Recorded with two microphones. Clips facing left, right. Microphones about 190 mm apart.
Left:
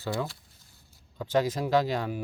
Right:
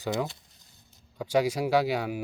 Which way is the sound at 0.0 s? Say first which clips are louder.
Right 2 dB; 20° right (ahead or behind).